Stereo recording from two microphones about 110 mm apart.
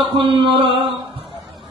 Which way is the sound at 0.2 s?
50° right (ahead or behind).